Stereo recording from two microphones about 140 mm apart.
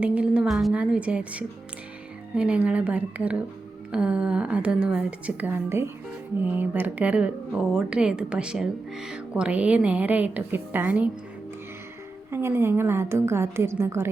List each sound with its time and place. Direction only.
0.0 s speech: 10° right (ahead or behind)
12.3 s speech: 15° right (ahead or behind)